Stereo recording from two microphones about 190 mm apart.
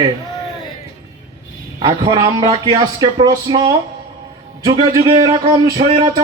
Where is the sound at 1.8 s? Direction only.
20° right (ahead or behind).